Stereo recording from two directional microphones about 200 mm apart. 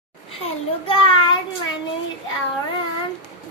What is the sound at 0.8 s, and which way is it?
Child singing, 25° left (ahead or behind).